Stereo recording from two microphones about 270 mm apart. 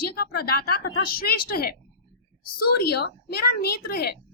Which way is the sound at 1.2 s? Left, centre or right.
Left.